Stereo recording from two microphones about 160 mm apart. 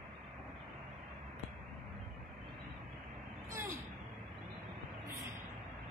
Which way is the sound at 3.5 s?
15° right (ahead or behind).